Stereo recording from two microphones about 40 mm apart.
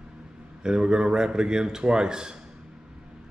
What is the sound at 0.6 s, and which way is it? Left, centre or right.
A man's voice, centre.